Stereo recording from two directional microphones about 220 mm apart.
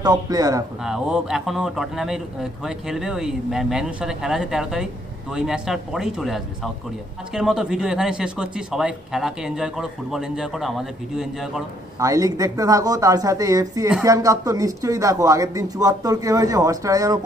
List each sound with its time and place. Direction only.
0.0 s speech: 15° right (ahead or behind)
0.8 s a man's voice: 5° right (ahead or behind)
12.0 s speech: 15° right (ahead or behind)